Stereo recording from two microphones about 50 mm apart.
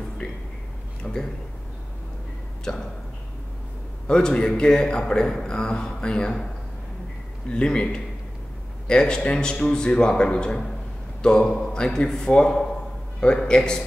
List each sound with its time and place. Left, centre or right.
1.0 s speech: left
4.1 s a man's voice: centre